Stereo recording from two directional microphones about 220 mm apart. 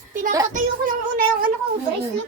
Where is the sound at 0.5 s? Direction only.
40° right (ahead or behind).